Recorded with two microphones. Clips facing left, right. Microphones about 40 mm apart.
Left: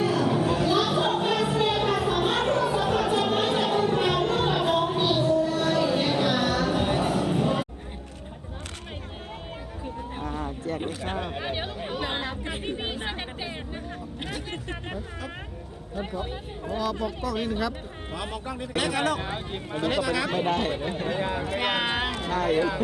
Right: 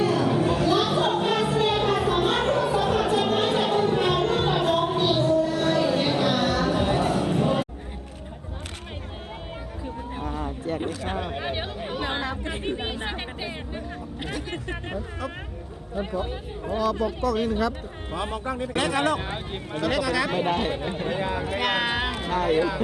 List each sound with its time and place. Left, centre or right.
0.0 s a sound: centre
2.2 s music: centre
6.9 s a sound: centre
11.1 s chatter: centre
12.1 s chatter: centre
12.6 s chatter: centre
14.5 s a sound: centre
16.0 s speech: centre
18.1 s speech: right
19.7 s speech: left
20.4 s speech: centre
22.1 s speech: centre